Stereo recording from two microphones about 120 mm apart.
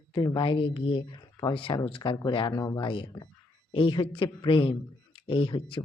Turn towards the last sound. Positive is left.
turn(degrees=45)  # may be behind; listen again after turning